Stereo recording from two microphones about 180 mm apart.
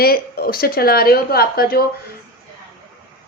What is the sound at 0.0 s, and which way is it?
A woman's voice, 55° left (ahead or behind).